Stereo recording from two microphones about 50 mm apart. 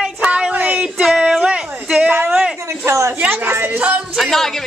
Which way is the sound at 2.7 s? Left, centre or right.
Right.